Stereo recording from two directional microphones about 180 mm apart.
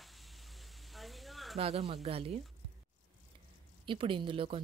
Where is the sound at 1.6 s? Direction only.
35° right (ahead or behind).